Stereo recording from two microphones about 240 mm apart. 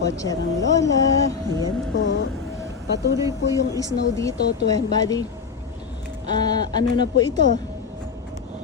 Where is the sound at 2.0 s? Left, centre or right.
Left.